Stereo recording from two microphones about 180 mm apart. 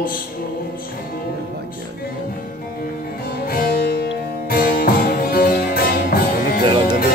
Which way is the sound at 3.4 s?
55° left (ahead or behind).